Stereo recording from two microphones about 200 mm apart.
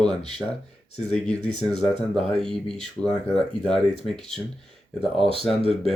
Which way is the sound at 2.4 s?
Centre (ahead or behind).